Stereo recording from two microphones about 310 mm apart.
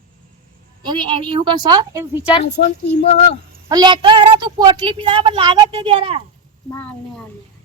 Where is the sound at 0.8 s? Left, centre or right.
Centre.